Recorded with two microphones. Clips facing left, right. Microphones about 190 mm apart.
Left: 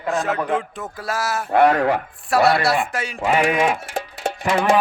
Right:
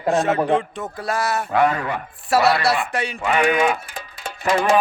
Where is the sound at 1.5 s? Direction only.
65° left (ahead or behind).